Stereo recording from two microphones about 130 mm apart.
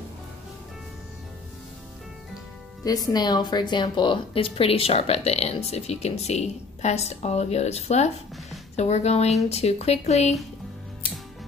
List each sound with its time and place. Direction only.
2.8 s a woman's voice: 30° left (ahead or behind); by 10.3 s 60° left (ahead or behind)